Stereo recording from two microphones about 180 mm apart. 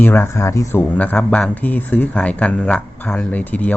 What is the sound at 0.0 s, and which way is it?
Speech, 10° left (ahead or behind).